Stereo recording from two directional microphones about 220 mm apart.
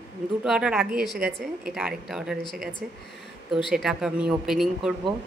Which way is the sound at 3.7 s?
Centre (ahead or behind).